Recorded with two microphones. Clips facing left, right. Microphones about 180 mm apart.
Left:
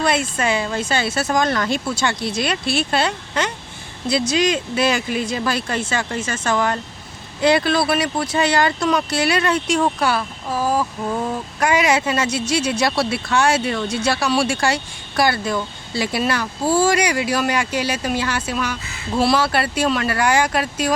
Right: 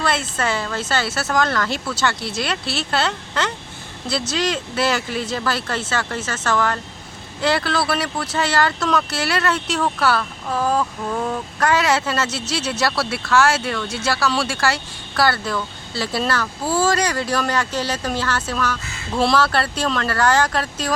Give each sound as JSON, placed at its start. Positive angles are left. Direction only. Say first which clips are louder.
{"t": 0.0, "sound": "speech", "louder": "left 2 dB", "side_deg": 15}